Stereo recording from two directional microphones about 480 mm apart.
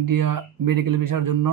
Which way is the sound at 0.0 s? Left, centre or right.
Right.